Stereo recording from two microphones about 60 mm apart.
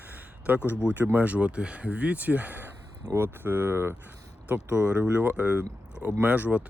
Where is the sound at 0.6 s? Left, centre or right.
Left.